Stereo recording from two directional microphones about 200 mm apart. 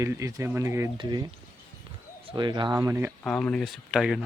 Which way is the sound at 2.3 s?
20° right (ahead or behind).